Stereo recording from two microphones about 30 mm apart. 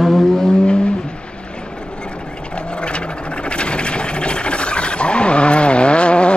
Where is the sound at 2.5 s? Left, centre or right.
Left.